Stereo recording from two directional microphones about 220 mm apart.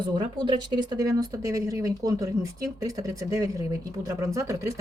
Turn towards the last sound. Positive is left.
turn(degrees=-15)  # may be behind; listen again after turning